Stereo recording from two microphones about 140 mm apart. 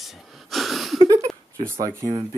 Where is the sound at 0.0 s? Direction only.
Centre (ahead or behind).